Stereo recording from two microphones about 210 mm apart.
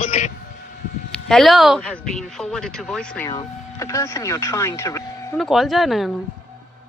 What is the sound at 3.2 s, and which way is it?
Speech, 15° left (ahead or behind).